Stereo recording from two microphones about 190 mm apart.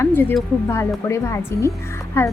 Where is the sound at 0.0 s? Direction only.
10° left (ahead or behind).